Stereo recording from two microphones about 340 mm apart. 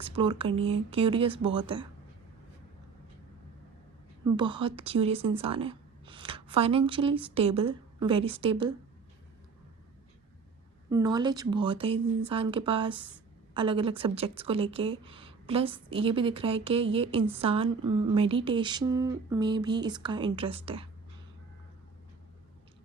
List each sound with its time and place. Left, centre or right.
0.0 s speech: centre
4.4 s speech: centre
10.8 s speech: centre